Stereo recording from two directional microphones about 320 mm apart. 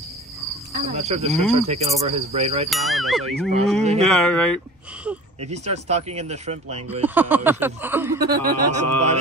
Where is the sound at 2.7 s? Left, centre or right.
Centre.